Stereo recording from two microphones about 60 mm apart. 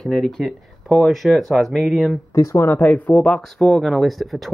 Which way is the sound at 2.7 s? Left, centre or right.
Left.